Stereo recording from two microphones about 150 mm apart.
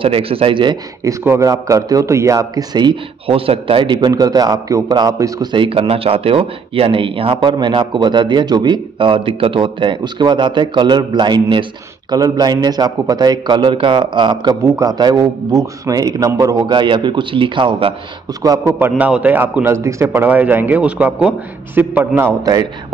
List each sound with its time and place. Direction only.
0.0 s a man's voice: 40° right (ahead or behind)
1.2 s a man's voice: 20° right (ahead or behind)
14.6 s a man's voice: 20° right (ahead or behind)
18.4 s a man's voice: 25° right (ahead or behind)
18.8 s a man's voice: 10° right (ahead or behind)
22.4 s a man's voice: 25° right (ahead or behind)